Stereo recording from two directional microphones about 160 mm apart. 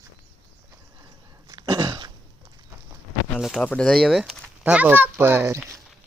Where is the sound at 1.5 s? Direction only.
25° right (ahead or behind).